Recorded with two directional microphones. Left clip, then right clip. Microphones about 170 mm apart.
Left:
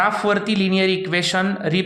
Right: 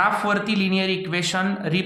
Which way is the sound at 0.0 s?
30° left (ahead or behind).